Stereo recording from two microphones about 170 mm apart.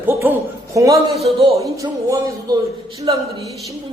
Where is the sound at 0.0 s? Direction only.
10° right (ahead or behind).